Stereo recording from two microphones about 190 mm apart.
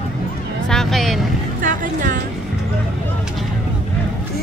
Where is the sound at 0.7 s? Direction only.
Centre (ahead or behind).